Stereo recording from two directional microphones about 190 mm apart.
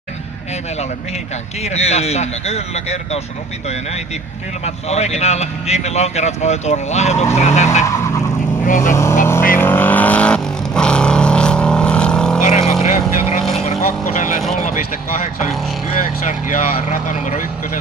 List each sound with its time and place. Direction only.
1.6 s speech: 35° left (ahead or behind)
4.6 s speech: 35° left (ahead or behind)
7.8 s vehicle: 15° left (ahead or behind)
8.6 s speech: 45° left (ahead or behind)
8.9 s vehicle: 15° left (ahead or behind)
12.4 s vehicle: 35° left (ahead or behind)
16.3 s speech: 40° left (ahead or behind)